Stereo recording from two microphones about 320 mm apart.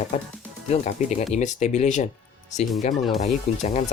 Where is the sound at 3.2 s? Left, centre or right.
Left.